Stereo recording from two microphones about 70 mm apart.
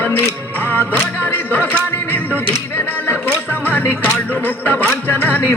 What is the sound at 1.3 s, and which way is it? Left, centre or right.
Music, left.